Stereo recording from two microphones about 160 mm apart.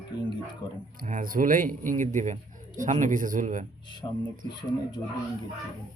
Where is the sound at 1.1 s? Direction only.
55° right (ahead or behind).